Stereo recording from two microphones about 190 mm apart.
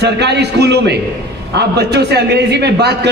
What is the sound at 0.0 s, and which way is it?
A man's voice, 60° right (ahead or behind).